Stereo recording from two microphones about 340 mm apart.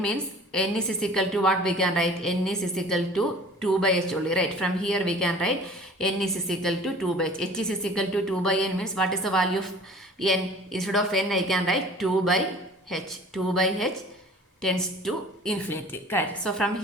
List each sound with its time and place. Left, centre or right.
0.0 s a woman's voice: centre